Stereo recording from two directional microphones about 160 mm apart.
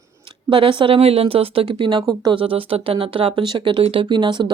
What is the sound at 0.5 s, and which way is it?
Speech, 35° right (ahead or behind).